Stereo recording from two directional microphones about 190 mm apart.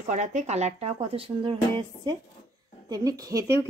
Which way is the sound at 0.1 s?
40° right (ahead or behind).